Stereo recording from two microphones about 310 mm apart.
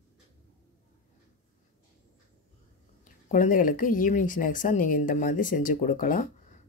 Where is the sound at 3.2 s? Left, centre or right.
Left.